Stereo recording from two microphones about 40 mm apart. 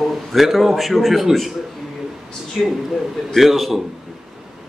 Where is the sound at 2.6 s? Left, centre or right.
Left.